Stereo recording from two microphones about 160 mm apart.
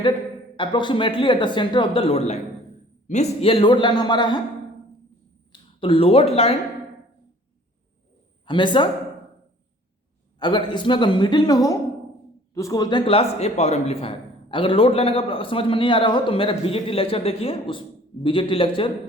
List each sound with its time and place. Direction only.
0.5 s a man's voice: 30° left (ahead or behind)
5.5 s speech: 35° left (ahead or behind)
8.4 s a man's voice: 30° left (ahead or behind)
10.4 s a man's voice: 30° left (ahead or behind)
13.1 s a man's voice: 40° left (ahead or behind)